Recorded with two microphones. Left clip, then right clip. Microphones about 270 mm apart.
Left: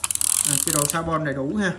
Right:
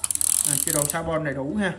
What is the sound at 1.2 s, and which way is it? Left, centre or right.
Speech, centre.